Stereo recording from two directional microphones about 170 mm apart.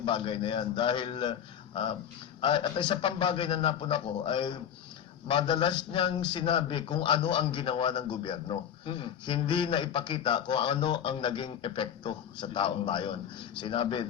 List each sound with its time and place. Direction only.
0.0 s a man's voice: 30° left (ahead or behind)